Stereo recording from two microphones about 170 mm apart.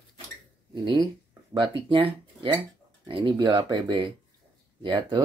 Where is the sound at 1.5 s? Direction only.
30° right (ahead or behind).